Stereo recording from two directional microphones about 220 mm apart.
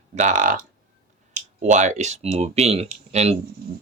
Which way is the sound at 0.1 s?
35° right (ahead or behind).